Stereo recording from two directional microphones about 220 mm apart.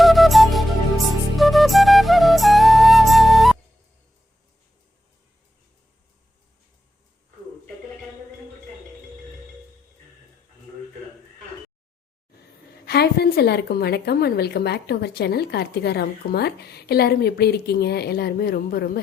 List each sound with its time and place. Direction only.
0.0 s flute: centre (ahead or behind)
12.8 s a woman's voice: 45° left (ahead or behind)